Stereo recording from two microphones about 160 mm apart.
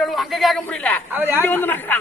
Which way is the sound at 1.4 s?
10° left (ahead or behind).